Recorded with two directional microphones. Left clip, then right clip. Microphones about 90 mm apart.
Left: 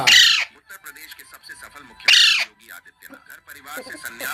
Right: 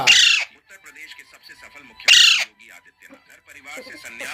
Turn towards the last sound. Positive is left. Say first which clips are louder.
# left 2 dB
turn(degrees=10)  # may be behind; listen again after turning